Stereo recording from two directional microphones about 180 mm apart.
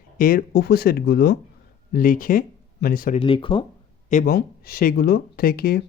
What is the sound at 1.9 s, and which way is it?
Speech, 50° left (ahead or behind).